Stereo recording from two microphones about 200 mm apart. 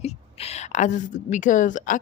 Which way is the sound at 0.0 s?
30° left (ahead or behind).